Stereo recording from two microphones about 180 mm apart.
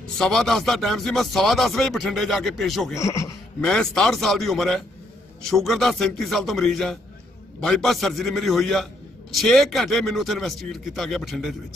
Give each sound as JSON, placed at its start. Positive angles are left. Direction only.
{"t": 0.2, "sound": "speech", "side_deg": 0}
{"t": 2.9, "sound": "speech", "side_deg": 15}
{"t": 3.6, "sound": "speech", "side_deg": 5}